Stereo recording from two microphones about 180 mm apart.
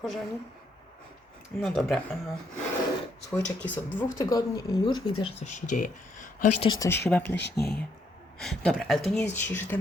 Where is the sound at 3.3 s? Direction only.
10° left (ahead or behind).